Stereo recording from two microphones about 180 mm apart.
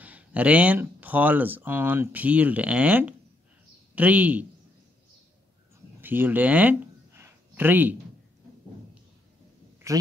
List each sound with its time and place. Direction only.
0.0 s speech: 10° right (ahead or behind)
5.9 s a sound: 10° right (ahead or behind)
9.8 s speech: 15° right (ahead or behind)